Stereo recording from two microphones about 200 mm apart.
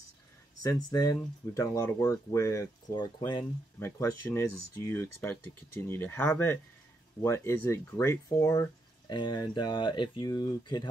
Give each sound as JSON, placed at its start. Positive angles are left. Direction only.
{"t": 0.6, "sound": "speech", "side_deg": 20}